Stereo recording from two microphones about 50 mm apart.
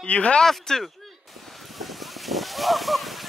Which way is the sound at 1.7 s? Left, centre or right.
Centre.